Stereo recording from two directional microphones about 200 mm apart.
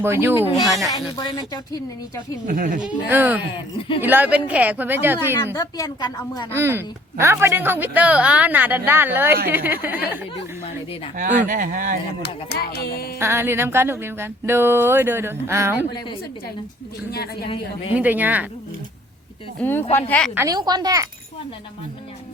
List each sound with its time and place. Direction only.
0.0 s a woman's voice: 10° right (ahead or behind)
0.9 s speech: 20° left (ahead or behind)
2.5 s speech: 40° right (ahead or behind)
2.8 s a woman's voice: 10° right (ahead or behind)
5.5 s speech: 20° left (ahead or behind)
6.5 s a woman's voice: 10° right (ahead or behind)
11.2 s speech: 40° right (ahead or behind)
12.2 s music: 55° left (ahead or behind)
13.1 s a woman's voice: 10° right (ahead or behind)
17.9 s a woman's voice: 10° right (ahead or behind)
19.5 s a woman's voice: 10° left (ahead or behind)
20.3 s speech: 15° right (ahead or behind)